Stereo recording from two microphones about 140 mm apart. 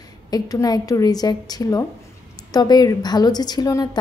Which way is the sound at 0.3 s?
25° left (ahead or behind).